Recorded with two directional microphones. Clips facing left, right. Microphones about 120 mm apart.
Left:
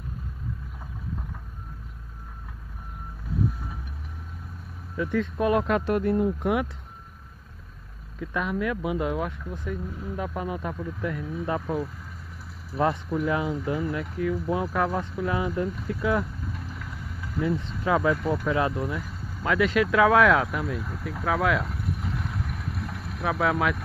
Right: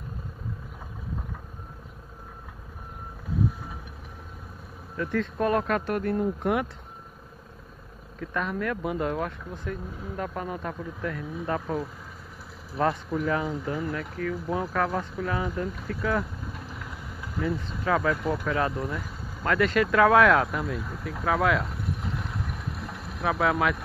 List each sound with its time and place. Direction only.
4.9 s speech: 10° left (ahead or behind)
6.2 s speech: 5° left (ahead or behind)
8.2 s speech: 10° left (ahead or behind)
11.6 s speech: 5° right (ahead or behind)
13.3 s speech: 15° left (ahead or behind)
13.9 s speech: 15° left (ahead or behind)
16.5 s vehicle: 5° right (ahead or behind)
17.8 s speech: 15° left (ahead or behind)
18.1 s speech: 5° right (ahead or behind)
18.5 s speech: 15° left (ahead or behind)
21.6 s vehicle: 20° right (ahead or behind)
22.5 s boat: 20° right (ahead or behind)
23.2 s speech: centre (ahead or behind)